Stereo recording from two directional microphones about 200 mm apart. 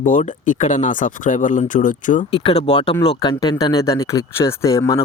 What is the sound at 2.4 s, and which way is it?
Speech, 30° left (ahead or behind).